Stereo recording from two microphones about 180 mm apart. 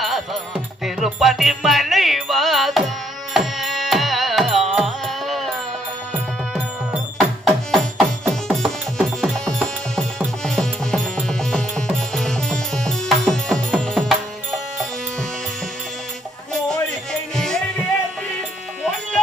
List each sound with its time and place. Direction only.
0.0 s music: centre (ahead or behind)
16.5 s music: 5° left (ahead or behind)